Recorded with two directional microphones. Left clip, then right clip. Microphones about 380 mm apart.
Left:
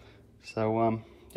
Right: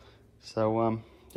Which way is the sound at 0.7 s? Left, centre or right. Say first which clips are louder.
Left 3 dB; centre.